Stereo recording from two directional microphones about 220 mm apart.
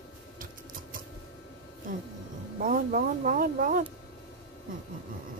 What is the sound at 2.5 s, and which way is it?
Speech, 40° right (ahead or behind).